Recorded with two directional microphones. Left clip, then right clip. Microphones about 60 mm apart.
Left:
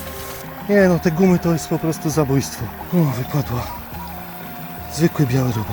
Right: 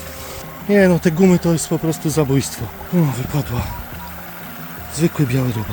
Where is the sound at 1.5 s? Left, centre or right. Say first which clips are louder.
Right 1 dB; right.